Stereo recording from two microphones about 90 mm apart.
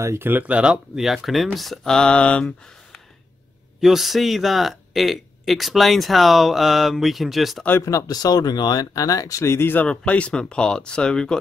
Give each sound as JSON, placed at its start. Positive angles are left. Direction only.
{"t": 0.0, "sound": "speech", "side_deg": -30}
{"t": 7.8, "sound": "speech", "side_deg": 40}
{"t": 9.8, "sound": "speech", "side_deg": 15}